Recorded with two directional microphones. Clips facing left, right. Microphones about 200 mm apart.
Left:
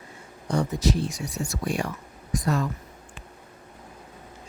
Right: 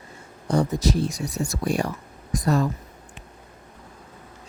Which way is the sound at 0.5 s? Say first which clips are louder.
Right 3 dB; 40° right (ahead or behind).